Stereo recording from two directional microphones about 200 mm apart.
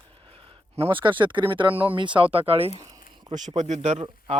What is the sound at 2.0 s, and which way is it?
Speech, 25° right (ahead or behind).